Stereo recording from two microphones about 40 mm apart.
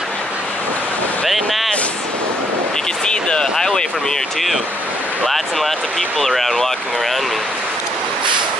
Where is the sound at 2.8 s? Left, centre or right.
Left.